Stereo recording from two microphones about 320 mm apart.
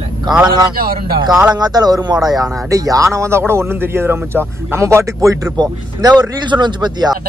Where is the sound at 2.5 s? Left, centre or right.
Centre.